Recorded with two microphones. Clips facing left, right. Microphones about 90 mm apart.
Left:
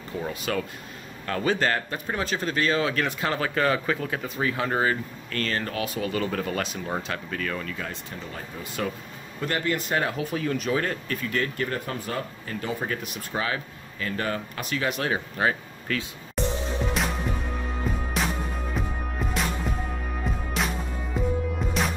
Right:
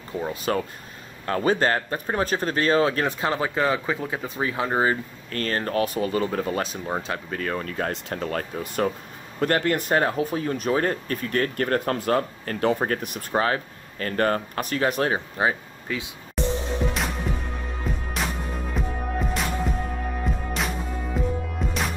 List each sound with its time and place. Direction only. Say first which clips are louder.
0.1 s speech: right 3 dB; 25° right (ahead or behind)
5.4 s speech: right 4 dB; 40° right (ahead or behind)
7.9 s speech: right 9 dB; 65° right (ahead or behind)
9.4 s speech: right 5 dB; 50° right (ahead or behind)
15.1 s speech: right 1 dB; 20° right (ahead or behind)
16.4 s music: right 2 dB; centre (ahead or behind)